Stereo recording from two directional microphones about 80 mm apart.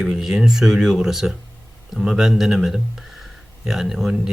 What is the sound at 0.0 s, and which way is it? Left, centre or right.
Speech, centre.